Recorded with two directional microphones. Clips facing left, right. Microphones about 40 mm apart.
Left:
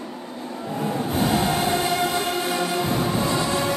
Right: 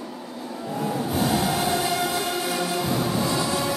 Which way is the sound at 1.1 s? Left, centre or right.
Left.